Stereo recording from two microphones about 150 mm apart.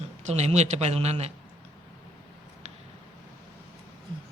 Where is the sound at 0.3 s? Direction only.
50° right (ahead or behind).